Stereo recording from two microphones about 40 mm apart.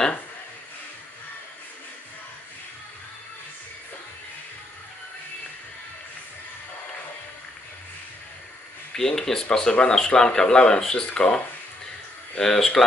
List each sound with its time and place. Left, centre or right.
8.9 s speech: centre
12.4 s speech: centre